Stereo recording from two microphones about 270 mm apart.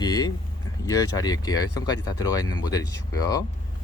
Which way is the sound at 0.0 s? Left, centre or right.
Centre.